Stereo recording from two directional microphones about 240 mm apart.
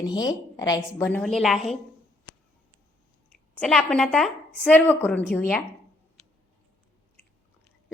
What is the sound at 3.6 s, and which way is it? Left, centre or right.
A woman's voice, centre.